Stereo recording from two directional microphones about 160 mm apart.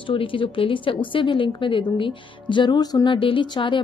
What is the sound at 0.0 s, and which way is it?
Speech, 35° left (ahead or behind).